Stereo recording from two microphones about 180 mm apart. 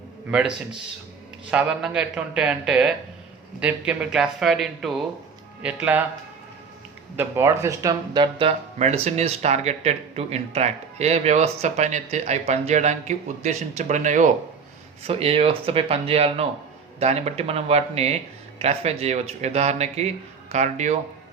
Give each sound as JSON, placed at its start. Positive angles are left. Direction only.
{"t": 0.3, "sound": "speech", "side_deg": -5}
{"t": 7.2, "sound": "speech", "side_deg": -15}
{"t": 15.0, "sound": "speech", "side_deg": -30}